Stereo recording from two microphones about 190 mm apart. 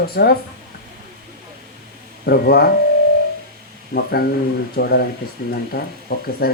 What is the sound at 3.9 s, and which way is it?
Speech, 55° left (ahead or behind).